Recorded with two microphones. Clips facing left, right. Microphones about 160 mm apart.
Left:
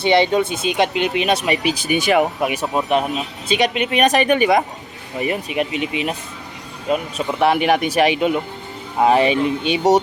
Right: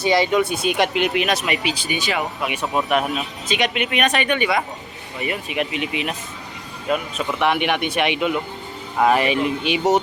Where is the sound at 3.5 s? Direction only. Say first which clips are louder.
Left 4 dB; 35° left (ahead or behind).